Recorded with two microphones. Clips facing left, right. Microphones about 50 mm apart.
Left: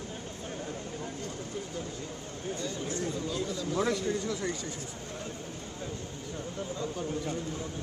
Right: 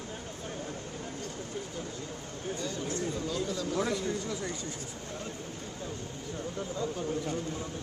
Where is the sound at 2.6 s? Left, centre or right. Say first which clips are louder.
Even; right.